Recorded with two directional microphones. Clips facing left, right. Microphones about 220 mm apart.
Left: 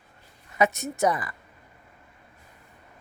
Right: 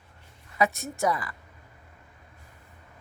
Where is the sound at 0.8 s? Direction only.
20° left (ahead or behind).